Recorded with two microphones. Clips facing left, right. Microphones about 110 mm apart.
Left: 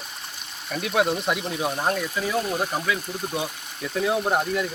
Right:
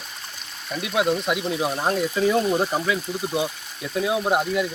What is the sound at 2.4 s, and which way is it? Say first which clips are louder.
Speech: right 4 dB; 5° right (ahead or behind).